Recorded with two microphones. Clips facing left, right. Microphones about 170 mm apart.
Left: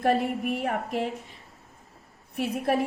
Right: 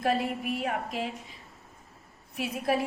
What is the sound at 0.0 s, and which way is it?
A woman's voice, 55° left (ahead or behind).